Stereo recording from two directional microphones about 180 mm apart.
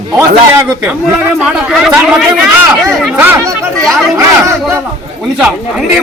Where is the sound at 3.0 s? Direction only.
5° right (ahead or behind).